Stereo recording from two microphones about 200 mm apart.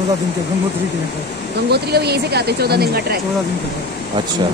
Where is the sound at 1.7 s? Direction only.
55° right (ahead or behind).